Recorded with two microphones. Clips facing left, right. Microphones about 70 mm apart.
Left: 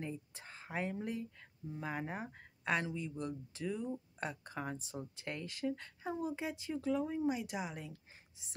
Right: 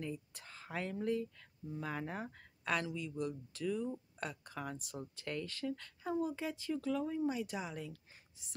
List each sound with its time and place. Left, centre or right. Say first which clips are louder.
0.0 s speech: even; left